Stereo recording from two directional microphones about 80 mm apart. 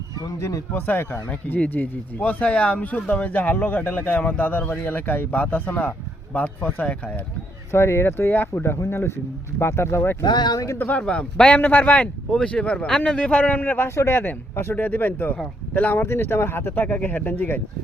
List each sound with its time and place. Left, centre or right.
0.3 s speech: left
0.7 s speech: left
7.7 s speech: left
10.2 s speech: left
10.8 s speech: left
11.0 s speech: centre